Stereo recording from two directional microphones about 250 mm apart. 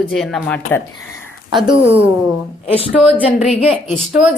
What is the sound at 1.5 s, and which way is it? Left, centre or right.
Speech, centre.